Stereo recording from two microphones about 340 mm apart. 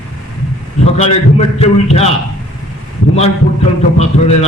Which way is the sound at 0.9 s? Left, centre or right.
Centre.